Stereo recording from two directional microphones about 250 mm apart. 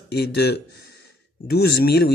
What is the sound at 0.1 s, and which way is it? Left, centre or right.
Speech, left.